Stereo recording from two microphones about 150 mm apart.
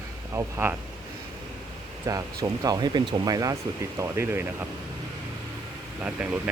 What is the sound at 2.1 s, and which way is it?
Speech, 20° right (ahead or behind).